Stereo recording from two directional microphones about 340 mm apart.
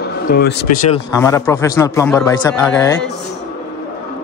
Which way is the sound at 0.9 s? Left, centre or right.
Centre.